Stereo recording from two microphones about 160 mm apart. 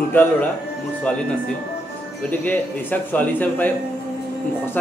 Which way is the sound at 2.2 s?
10° left (ahead or behind).